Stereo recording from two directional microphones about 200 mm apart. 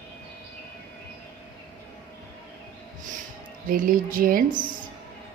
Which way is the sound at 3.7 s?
45° right (ahead or behind).